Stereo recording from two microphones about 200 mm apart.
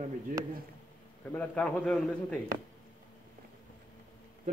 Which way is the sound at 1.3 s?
5° left (ahead or behind).